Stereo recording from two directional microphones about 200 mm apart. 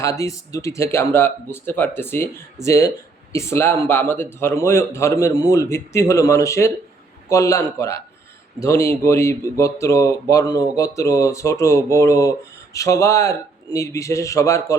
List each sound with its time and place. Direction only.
0.0 s speech: 15° left (ahead or behind)